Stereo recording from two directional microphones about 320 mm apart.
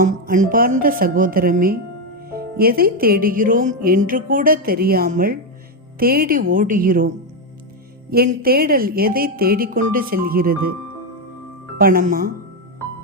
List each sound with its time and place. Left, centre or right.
0.0 s speech: right
8.1 s speech: right
11.8 s speech: right